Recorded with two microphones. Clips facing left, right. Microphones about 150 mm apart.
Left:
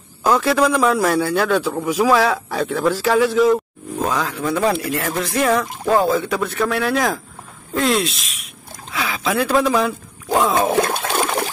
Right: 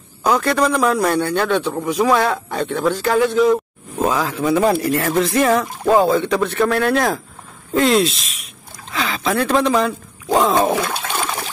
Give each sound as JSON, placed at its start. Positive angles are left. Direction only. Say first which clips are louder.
{"t": 0.2, "sound": "a man's voice", "louder": "left 1 dB", "side_deg": 0}
{"t": 10.8, "sound": "trickle", "louder": "left 4 dB", "side_deg": 50}